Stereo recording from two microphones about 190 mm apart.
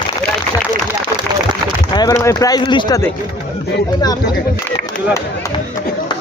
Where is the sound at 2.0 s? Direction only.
15° left (ahead or behind).